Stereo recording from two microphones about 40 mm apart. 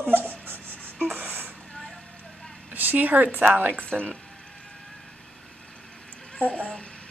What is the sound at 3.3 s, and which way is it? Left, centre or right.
Speech, right.